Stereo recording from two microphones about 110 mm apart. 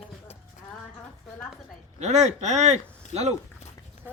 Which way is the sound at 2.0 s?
90° right.